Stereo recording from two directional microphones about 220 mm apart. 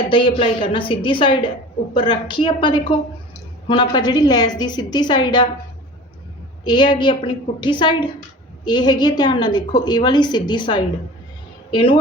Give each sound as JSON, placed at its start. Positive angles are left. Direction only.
{"t": 0.1, "sound": "a woman's voice", "side_deg": 25}
{"t": 6.7, "sound": "a woman's voice", "side_deg": 20}